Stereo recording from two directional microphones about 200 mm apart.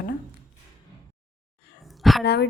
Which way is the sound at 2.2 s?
55° left (ahead or behind).